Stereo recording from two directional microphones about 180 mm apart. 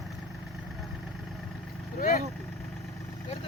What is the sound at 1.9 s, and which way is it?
Speech, 50° left (ahead or behind).